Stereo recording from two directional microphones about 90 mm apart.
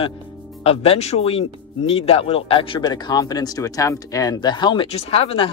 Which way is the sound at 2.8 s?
50° left (ahead or behind).